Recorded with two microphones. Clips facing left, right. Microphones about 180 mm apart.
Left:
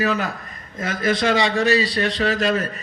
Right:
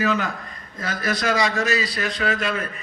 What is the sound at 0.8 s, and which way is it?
A man's voice, 25° left (ahead or behind).